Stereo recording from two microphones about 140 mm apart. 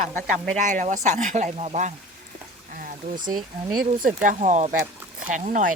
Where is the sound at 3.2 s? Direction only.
80° right.